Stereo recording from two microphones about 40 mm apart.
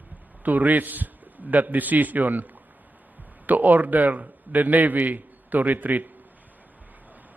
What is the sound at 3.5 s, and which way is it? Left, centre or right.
A man's voice, right.